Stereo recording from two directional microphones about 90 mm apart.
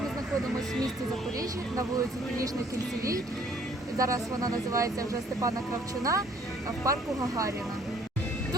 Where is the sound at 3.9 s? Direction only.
40° right (ahead or behind).